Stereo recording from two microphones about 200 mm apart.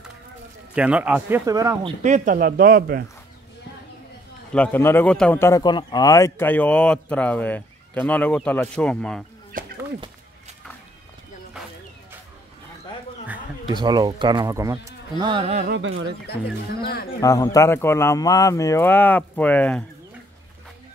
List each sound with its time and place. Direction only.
0.7 s speech: 5° right (ahead or behind)
2.0 s speech: 40° right (ahead or behind)
4.5 s a man's voice: 10° left (ahead or behind)
13.7 s speech: 20° right (ahead or behind)
15.7 s speech: 70° right (ahead or behind)
16.8 s speech: 50° left (ahead or behind)
17.2 s a man's voice: 15° left (ahead or behind)